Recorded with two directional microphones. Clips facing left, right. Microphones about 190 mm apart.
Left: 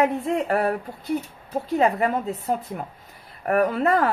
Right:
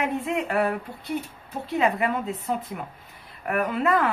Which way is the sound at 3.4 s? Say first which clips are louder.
Left 4 dB; 40° left (ahead or behind).